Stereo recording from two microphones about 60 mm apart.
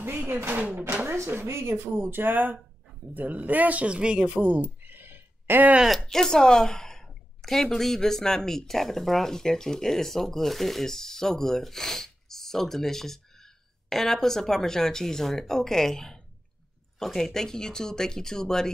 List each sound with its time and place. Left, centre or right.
0.3 s speech: right
1.1 s speech: right
5.9 s a woman's voice: centre